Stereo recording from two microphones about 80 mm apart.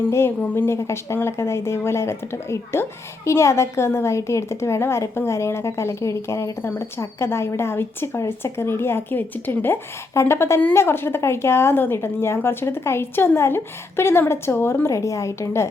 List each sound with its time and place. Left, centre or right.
0.0 s speech: left